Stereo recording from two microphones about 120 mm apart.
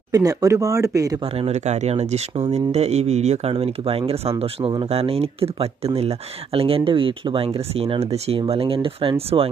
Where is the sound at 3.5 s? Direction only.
55° right (ahead or behind).